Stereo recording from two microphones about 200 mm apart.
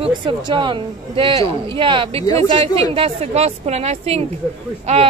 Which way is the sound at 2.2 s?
20° left (ahead or behind).